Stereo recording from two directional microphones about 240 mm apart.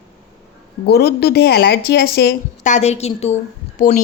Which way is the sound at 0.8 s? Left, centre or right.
Left.